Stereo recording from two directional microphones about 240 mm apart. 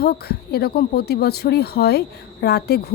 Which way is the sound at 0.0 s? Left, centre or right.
Left.